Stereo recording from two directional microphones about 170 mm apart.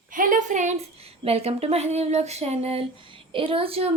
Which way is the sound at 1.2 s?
35° right (ahead or behind).